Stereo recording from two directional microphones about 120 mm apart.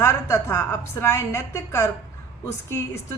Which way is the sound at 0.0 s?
20° left (ahead or behind).